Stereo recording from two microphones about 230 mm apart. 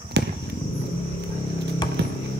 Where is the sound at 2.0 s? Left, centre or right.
Right.